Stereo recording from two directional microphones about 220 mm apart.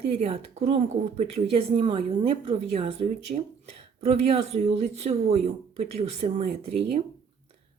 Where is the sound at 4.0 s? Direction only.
30° right (ahead or behind).